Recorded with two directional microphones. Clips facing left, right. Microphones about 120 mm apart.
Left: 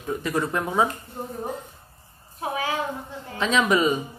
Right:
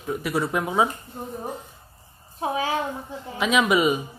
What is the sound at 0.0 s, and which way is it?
Speech, 10° right (ahead or behind).